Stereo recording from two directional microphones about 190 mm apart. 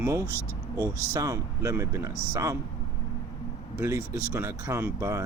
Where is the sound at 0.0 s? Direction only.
15° right (ahead or behind).